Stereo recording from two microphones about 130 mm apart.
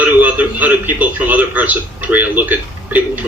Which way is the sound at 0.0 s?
10° right (ahead or behind).